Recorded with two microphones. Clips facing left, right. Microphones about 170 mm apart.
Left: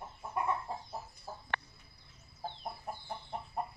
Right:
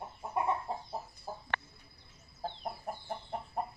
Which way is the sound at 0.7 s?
25° right (ahead or behind).